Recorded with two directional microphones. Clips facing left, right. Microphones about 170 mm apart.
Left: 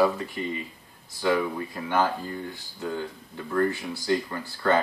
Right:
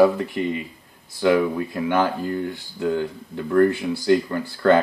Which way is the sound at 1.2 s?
70° right (ahead or behind).